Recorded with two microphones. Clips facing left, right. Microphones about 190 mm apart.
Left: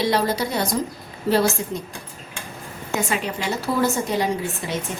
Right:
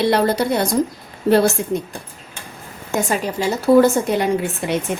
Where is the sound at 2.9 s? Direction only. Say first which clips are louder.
Right 4 dB; 40° right (ahead or behind).